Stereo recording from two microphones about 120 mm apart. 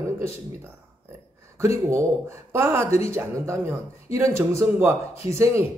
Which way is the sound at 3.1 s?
20° right (ahead or behind).